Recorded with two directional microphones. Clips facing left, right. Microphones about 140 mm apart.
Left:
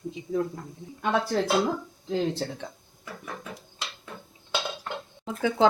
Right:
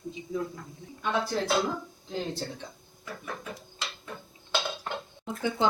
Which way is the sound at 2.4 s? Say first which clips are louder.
Left 4 dB; 75° left (ahead or behind).